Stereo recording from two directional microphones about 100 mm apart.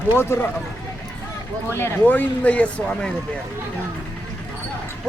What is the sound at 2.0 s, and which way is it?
Speech, 15° left (ahead or behind).